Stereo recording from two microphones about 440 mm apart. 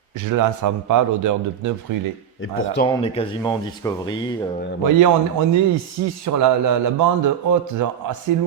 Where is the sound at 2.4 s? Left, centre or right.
Left.